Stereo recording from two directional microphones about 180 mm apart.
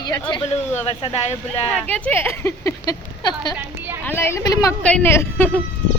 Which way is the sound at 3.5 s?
10° right (ahead or behind).